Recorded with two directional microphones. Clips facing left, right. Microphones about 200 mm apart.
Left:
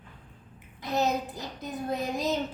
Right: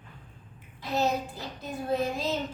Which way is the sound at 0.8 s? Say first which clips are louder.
Even; 20° left (ahead or behind).